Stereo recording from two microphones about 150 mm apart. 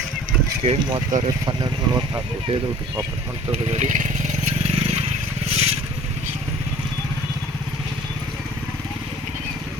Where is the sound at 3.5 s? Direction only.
45° right (ahead or behind).